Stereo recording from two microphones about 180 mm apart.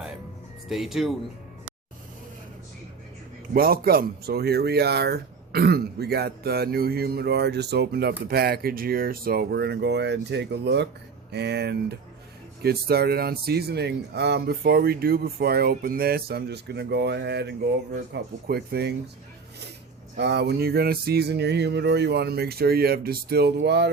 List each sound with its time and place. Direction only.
0.7 s speech: centre (ahead or behind)
3.5 s speech: 55° right (ahead or behind)
20.1 s speech: 70° right (ahead or behind)